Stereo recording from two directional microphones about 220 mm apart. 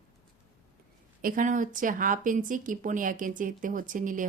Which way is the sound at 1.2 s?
35° right (ahead or behind).